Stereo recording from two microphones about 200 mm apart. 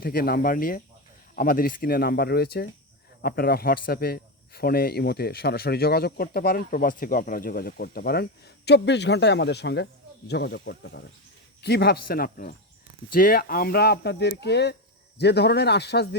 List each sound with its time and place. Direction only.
0.0 s speech: 50° left (ahead or behind)